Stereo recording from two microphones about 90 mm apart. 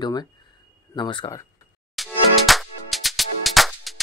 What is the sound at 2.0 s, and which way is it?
Music, centre (ahead or behind).